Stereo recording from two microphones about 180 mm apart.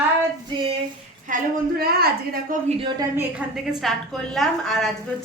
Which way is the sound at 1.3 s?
55° right (ahead or behind).